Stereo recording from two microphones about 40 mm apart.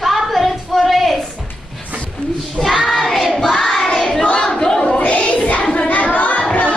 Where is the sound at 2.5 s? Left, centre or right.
Centre.